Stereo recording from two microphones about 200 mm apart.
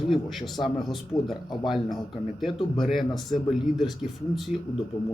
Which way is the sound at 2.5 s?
25° left (ahead or behind).